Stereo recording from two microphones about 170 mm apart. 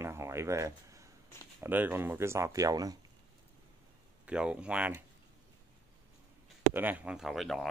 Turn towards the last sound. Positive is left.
turn(degrees=0)  # may be behind; listen again after turning